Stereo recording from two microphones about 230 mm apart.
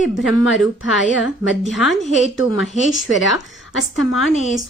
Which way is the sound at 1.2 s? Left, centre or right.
Centre.